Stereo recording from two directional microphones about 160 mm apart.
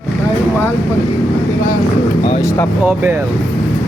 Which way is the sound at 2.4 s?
15° left (ahead or behind).